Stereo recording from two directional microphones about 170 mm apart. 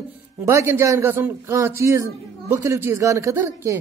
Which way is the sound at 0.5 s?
15° right (ahead or behind).